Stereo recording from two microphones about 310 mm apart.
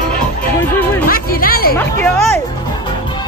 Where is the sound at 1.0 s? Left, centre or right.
Left.